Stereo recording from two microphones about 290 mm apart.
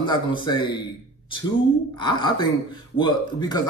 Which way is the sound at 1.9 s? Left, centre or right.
Centre.